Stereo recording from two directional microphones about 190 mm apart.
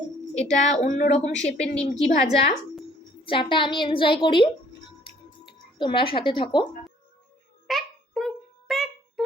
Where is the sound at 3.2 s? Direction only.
25° left (ahead or behind).